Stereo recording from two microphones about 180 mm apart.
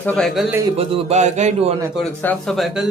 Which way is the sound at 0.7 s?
35° right (ahead or behind).